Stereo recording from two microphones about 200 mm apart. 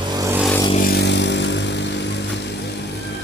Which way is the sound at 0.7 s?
50° left (ahead or behind).